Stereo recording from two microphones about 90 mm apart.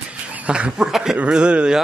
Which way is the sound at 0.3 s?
15° right (ahead or behind).